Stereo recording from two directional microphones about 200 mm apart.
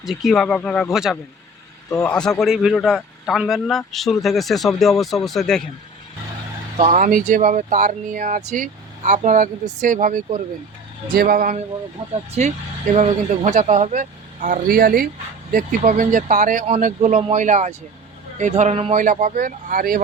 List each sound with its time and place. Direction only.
0.0 s speech: centre (ahead or behind)
1.9 s a man's voice: 15° left (ahead or behind)
2.4 s speech: 5° right (ahead or behind)
6.7 s speech: 35° right (ahead or behind)
12.9 s speech: 35° right (ahead or behind)